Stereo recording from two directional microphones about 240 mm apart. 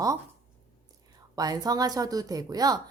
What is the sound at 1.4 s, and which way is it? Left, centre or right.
A woman's voice, centre.